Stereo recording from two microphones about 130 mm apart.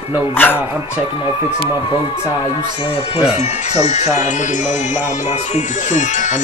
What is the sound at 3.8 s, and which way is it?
Speech, 60° left (ahead or behind).